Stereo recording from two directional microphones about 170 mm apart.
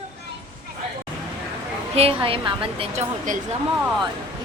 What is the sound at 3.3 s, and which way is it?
Speech, 50° right (ahead or behind).